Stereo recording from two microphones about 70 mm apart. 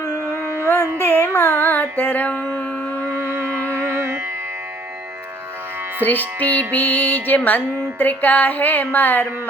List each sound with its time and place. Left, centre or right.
0.9 s music: left
3.1 s music: right
6.0 s music: left